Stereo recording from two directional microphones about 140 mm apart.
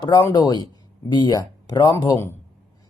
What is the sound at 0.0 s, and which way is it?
Speech, 25° left (ahead or behind).